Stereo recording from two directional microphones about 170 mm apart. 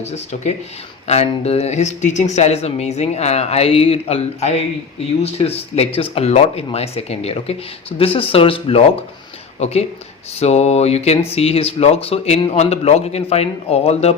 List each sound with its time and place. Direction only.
0.0 s speech: 40° left (ahead or behind)